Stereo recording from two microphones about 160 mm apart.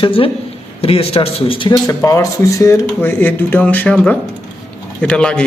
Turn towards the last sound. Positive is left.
turn(degrees=5)  # may be behind; listen again after turning